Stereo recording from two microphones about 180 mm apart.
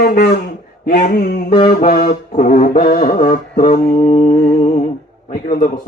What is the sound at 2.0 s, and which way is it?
Speech, 40° left (ahead or behind).